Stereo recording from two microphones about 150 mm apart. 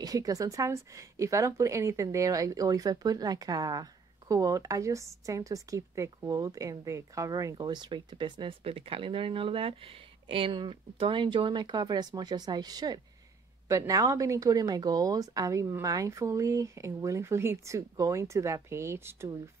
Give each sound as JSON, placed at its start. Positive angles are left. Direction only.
{"t": 0.0, "sound": "speech", "side_deg": -25}